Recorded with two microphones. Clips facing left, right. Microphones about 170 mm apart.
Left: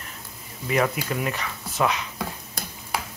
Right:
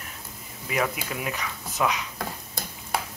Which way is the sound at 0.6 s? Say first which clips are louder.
Left 4 dB; 5° right (ahead or behind).